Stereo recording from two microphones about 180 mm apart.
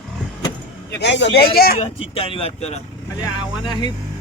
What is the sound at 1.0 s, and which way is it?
Speech, 75° left (ahead or behind).